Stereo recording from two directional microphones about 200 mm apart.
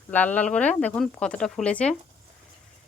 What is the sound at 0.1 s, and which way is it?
Speech, 10° left (ahead or behind).